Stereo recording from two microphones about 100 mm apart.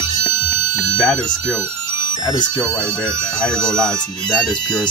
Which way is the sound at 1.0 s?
5° left (ahead or behind).